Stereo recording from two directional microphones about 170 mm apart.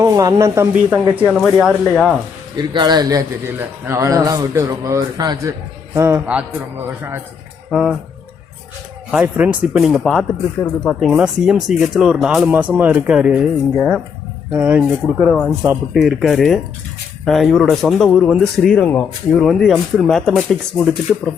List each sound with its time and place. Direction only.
0.0 s speech: 20° right (ahead or behind); by 2.1 s 5° right (ahead or behind)
2.6 s a man's voice: 25° right (ahead or behind)
7.7 s speech: centre (ahead or behind)
9.2 s speech: 10° right (ahead or behind)
14.5 s speech: 10° right (ahead or behind)